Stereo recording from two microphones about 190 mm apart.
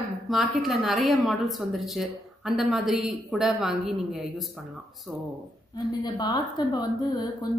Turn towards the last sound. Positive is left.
turn(degrees=20)  # may be behind; listen again after turning